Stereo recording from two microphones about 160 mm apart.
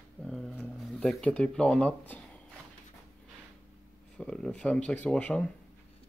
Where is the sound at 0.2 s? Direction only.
5° left (ahead or behind).